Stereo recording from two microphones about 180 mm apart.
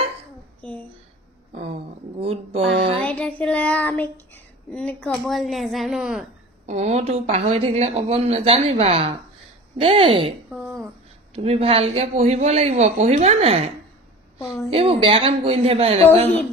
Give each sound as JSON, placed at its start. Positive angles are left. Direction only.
{"t": 0.6, "sound": "a sound", "side_deg": 10}
{"t": 1.5, "sound": "a sound", "side_deg": -35}
{"t": 3.0, "sound": "child singing", "side_deg": 5}
{"t": 4.7, "sound": "speech", "side_deg": 5}
{"t": 6.7, "sound": "speech", "side_deg": -40}
{"t": 10.5, "sound": "a sound", "side_deg": 0}
{"t": 11.4, "sound": "speech", "side_deg": -35}
{"t": 14.3, "sound": "a woman's voice", "side_deg": 15}
{"t": 14.7, "sound": "speech", "side_deg": -30}